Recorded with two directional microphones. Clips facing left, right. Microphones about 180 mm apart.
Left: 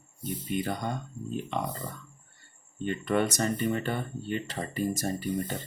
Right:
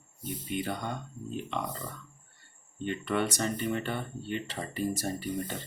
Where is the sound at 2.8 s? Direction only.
45° left (ahead or behind).